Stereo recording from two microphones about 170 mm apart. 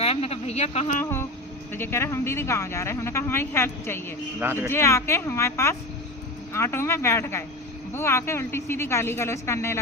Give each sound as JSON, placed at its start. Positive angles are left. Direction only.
{"t": 0.0, "sound": "speech", "side_deg": 35}
{"t": 1.0, "sound": "a sound", "side_deg": 15}
{"t": 1.7, "sound": "speech", "side_deg": 15}
{"t": 4.4, "sound": "speech", "side_deg": -15}
{"t": 4.7, "sound": "speech", "side_deg": 15}